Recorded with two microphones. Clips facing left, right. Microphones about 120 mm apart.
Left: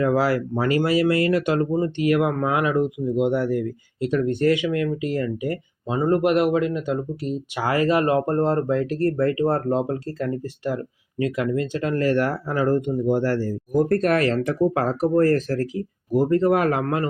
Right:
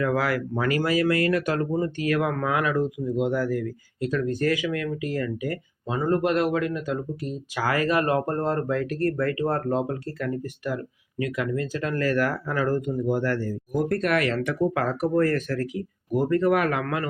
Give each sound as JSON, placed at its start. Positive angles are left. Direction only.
{"t": 0.0, "sound": "speech", "side_deg": 30}